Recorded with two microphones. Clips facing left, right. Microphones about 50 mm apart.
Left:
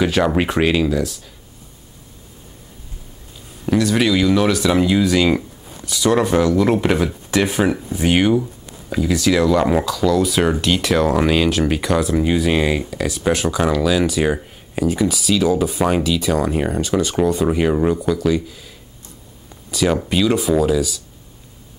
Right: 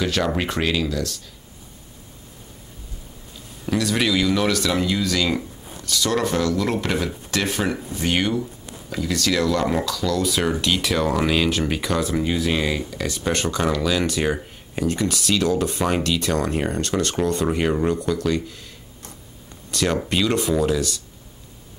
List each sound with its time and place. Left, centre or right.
0.0 s speech: centre
3.6 s speech: centre
12.9 s speech: centre
19.7 s speech: centre